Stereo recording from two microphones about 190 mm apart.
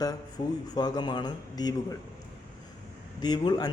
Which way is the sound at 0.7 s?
20° left (ahead or behind).